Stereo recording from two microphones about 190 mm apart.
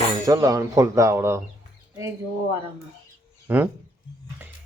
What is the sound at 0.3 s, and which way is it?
Speech, 15° right (ahead or behind).